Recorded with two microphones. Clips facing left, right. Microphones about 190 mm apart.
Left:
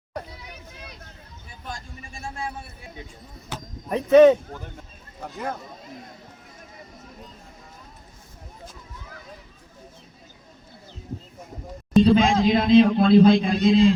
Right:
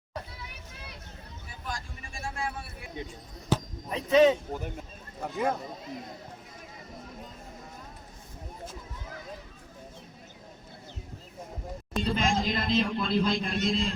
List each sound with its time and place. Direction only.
3.8 s speech: 55° left (ahead or behind)
5.2 s speech: centre (ahead or behind)
12.0 s a man's voice: 75° left (ahead or behind)